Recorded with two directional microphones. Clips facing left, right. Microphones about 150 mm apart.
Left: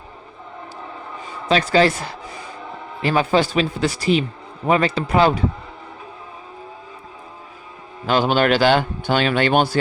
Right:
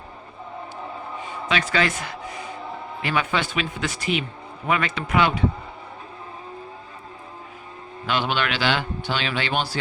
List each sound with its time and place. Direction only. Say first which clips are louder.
1.5 s speech: left 7 dB; 35° left (ahead or behind)
8.0 s a man's voice: left 7 dB; 40° left (ahead or behind)